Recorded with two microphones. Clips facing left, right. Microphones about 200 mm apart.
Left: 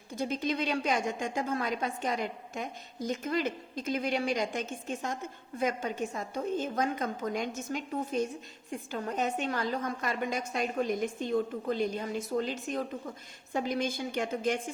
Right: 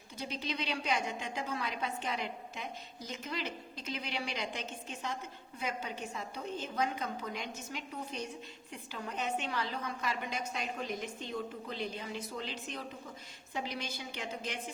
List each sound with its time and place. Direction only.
0.2 s a woman's voice: 50° left (ahead or behind)